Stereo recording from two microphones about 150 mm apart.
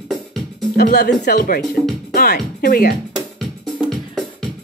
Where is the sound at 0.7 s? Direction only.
90° left.